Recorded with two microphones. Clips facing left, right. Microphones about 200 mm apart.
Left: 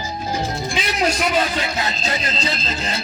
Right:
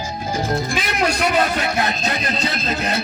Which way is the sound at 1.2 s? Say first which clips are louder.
Right 2 dB; 60° right (ahead or behind).